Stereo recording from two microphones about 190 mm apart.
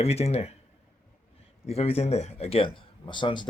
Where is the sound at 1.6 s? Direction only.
30° left (ahead or behind).